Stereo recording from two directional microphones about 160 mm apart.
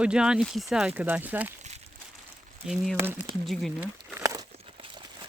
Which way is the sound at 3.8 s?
15° right (ahead or behind).